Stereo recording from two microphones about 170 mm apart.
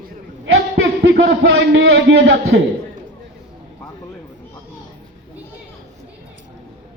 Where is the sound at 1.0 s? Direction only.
90° right.